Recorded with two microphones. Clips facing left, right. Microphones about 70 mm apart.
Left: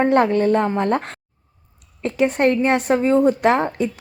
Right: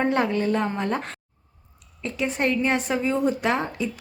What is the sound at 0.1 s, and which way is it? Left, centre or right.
Speech, left.